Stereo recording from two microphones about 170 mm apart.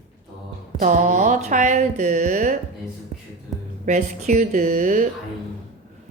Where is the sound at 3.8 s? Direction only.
45° right (ahead or behind).